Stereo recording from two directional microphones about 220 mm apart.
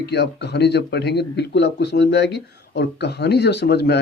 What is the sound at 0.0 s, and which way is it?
A man's voice, 50° left (ahead or behind).